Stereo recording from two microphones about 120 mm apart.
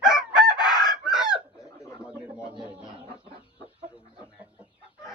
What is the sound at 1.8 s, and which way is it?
Bird, 25° left (ahead or behind).